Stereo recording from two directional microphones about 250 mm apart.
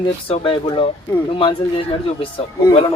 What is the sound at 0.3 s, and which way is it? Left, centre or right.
Speech, left.